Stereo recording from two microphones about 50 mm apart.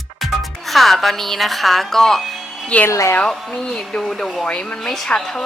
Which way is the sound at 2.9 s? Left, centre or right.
Left.